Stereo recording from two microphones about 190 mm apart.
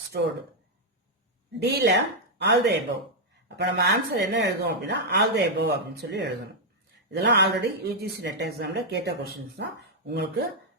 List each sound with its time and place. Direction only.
0.1 s speech: 60° right (ahead or behind)
1.5 s speech: 60° right (ahead or behind)